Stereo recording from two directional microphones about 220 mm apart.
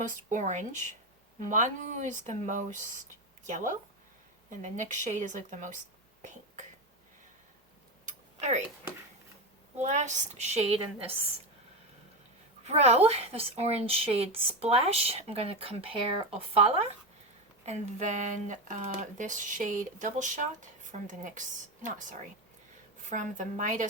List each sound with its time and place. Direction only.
0.3 s speech: 35° right (ahead or behind)
8.0 s tick-tock: 30° right (ahead or behind)
9.7 s speech: 35° right (ahead or behind)
12.6 s a woman's voice: 30° right (ahead or behind)
17.7 s speech: 35° right (ahead or behind)